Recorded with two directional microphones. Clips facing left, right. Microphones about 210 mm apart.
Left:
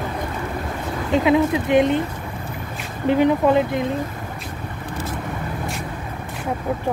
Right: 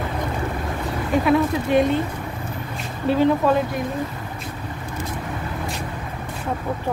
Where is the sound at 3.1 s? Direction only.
15° left (ahead or behind).